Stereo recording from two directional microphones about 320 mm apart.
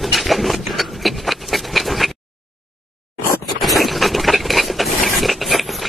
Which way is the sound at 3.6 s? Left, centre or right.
Centre.